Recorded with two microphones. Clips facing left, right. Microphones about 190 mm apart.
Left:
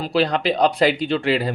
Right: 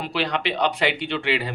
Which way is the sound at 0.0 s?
35° left (ahead or behind).